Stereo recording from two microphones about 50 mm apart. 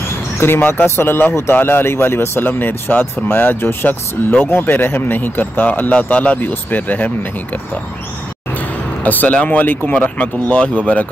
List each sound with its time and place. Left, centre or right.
0.4 s speech: left
0.8 s speech: left
6.4 s speech: left
8.5 s speech: left